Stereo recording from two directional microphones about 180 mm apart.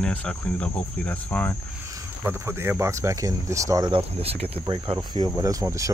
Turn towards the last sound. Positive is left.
turn(degrees=-15)  # may be behind; listen again after turning